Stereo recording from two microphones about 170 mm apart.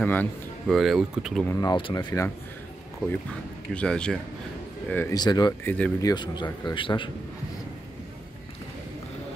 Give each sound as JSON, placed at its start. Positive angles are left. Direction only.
{"t": 0.0, "sound": "a man's voice", "side_deg": 10}
{"t": 0.7, "sound": "speech", "side_deg": 0}
{"t": 1.5, "sound": "speech", "side_deg": 25}
{"t": 3.7, "sound": "speech", "side_deg": 5}
{"t": 5.1, "sound": "speech", "side_deg": 25}
{"t": 5.6, "sound": "speech", "side_deg": 10}
{"t": 5.9, "sound": "speech", "side_deg": 25}